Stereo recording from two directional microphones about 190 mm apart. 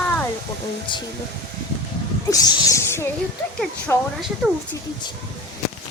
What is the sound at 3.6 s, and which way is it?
Speech, centre (ahead or behind).